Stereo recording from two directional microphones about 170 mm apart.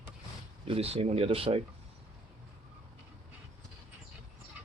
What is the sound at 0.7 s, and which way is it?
Speech, 35° right (ahead or behind).